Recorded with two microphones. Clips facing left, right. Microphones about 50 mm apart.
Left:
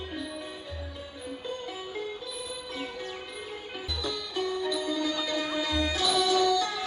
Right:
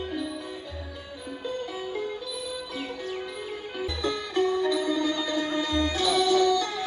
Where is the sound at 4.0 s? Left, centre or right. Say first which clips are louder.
Right 6 dB; right.